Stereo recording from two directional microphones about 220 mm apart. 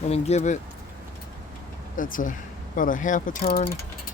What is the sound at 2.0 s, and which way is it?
Speech, 40° left (ahead or behind).